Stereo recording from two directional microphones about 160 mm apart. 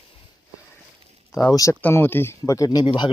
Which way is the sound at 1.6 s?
15° left (ahead or behind).